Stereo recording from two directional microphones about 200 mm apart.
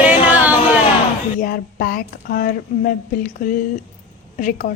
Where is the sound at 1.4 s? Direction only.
45° left (ahead or behind).